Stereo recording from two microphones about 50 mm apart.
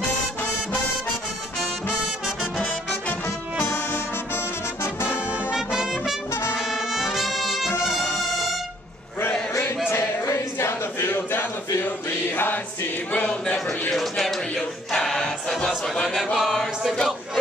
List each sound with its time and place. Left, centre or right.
3.6 s brass instrument: left
5.5 s brass instrument: centre
7.8 s music: centre
9.8 s a sound: left
13.3 s a man's voice: centre
13.9 s speech: centre
14.9 s choir: centre
16.3 s a capella: centre